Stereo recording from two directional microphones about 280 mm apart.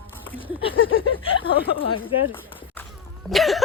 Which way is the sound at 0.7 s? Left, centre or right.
Left.